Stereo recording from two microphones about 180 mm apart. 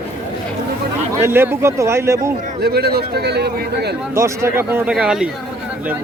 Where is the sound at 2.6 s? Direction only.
60° right (ahead or behind).